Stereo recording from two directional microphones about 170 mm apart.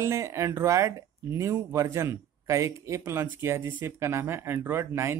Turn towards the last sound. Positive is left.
turn(degrees=-15)  # may be behind; listen again after turning